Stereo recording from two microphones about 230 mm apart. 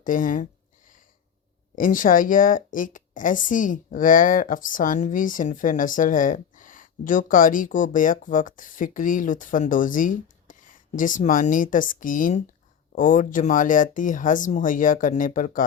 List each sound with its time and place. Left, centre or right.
0.0 s speech: left
1.7 s speech: left